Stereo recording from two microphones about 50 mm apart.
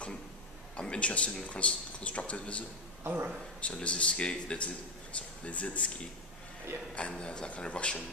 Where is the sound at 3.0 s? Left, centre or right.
Right.